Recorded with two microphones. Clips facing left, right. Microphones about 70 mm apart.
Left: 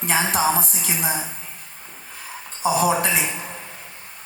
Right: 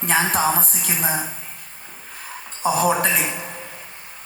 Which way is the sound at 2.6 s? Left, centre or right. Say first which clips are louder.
Even; right.